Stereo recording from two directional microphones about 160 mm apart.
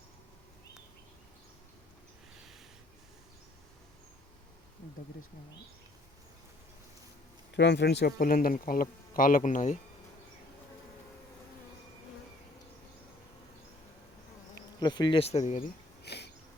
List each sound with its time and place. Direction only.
7.5 s speech: 90° left; by 9.7 s 50° left (ahead or behind)
14.8 s speech: 25° left (ahead or behind); by 15.6 s 45° left (ahead or behind)
16.0 s a sound: 90° left